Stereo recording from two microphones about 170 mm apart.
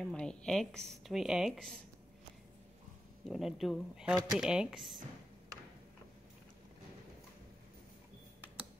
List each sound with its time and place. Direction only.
0.0 s a woman's voice: 5° left (ahead or behind)
3.3 s a woman's voice: centre (ahead or behind)